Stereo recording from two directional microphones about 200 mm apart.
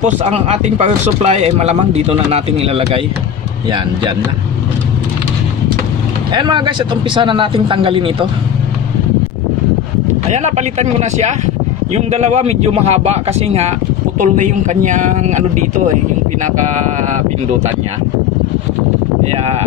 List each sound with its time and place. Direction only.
0.0 s speech: 35° right (ahead or behind)
6.3 s a man's voice: 20° right (ahead or behind)
10.3 s speech: 35° right (ahead or behind)